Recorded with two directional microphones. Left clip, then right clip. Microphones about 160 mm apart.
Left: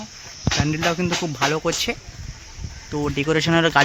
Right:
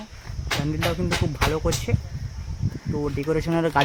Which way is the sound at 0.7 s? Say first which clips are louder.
Left 3 dB; 20° left (ahead or behind).